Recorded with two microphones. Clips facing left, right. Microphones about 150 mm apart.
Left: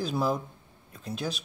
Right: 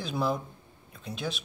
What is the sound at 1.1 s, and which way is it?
Speech, 40° left (ahead or behind).